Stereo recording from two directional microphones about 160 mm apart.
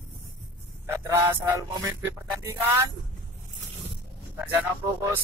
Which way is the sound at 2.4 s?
15° right (ahead or behind).